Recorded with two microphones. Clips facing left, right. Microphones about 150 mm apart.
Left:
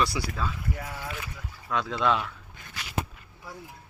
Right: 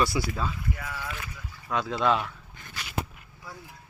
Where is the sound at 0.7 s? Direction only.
35° left (ahead or behind).